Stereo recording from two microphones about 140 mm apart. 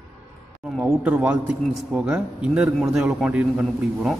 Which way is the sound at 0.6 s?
5° right (ahead or behind).